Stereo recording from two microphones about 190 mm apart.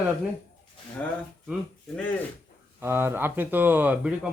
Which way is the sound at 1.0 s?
10° left (ahead or behind).